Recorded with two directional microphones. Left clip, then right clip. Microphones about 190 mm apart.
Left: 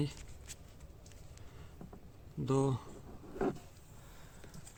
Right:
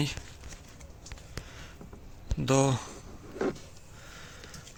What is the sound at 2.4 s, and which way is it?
Speech, 5° right (ahead or behind).